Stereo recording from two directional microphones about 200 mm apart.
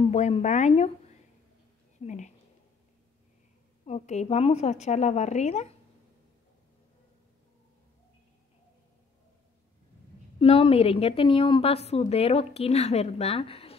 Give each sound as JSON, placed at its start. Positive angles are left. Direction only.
{"t": 0.0, "sound": "speech", "side_deg": 30}
{"t": 3.8, "sound": "a woman's voice", "side_deg": 35}
{"t": 10.4, "sound": "a woman's voice", "side_deg": 30}